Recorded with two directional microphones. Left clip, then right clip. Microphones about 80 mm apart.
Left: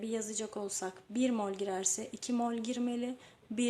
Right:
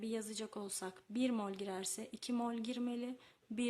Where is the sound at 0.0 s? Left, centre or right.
Right.